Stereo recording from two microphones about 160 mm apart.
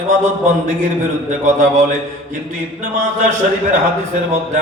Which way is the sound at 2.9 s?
50° right (ahead or behind).